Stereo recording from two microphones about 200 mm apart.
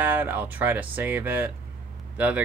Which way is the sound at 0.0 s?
10° right (ahead or behind).